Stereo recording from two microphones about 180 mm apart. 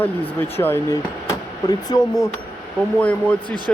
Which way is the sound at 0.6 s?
15° left (ahead or behind).